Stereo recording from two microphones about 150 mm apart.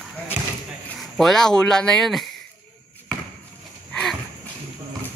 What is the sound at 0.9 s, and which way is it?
Speech, centre (ahead or behind).